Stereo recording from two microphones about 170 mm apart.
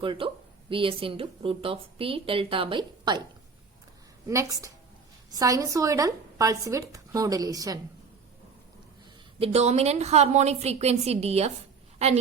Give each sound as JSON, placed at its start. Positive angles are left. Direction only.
{"t": 0.0, "sound": "a woman's voice", "side_deg": -30}
{"t": 4.3, "sound": "speech", "side_deg": -20}
{"t": 9.4, "sound": "a woman's voice", "side_deg": -40}